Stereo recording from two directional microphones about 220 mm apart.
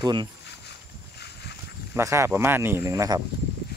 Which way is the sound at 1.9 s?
10° right (ahead or behind).